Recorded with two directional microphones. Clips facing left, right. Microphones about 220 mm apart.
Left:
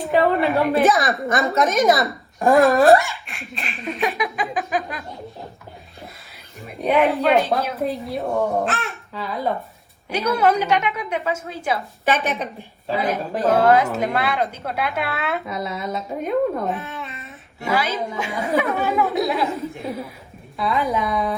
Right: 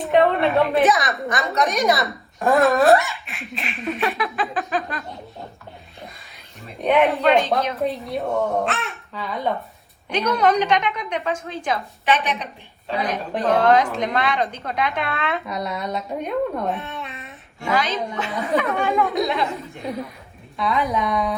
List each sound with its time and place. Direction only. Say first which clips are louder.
0.0 s a woman's voice: right 1 dB; centre (ahead or behind)
4.2 s a woman's voice: even; 15° left (ahead or behind)
6.8 s a woman's voice: even; centre (ahead or behind)
12.0 s a woman's voice: left 1 dB; 45° left (ahead or behind)
12.9 s a woman's voice: left 2 dB; centre (ahead or behind)